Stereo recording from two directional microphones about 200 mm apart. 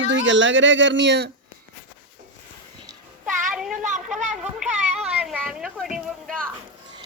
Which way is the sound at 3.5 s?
5° right (ahead or behind).